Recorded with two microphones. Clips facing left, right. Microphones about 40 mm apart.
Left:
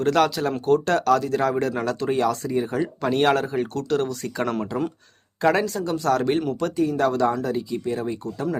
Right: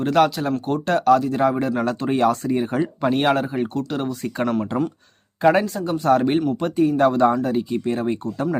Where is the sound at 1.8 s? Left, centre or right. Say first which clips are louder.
Right 6 dB; right.